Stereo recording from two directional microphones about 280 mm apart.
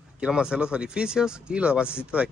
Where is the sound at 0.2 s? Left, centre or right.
Centre.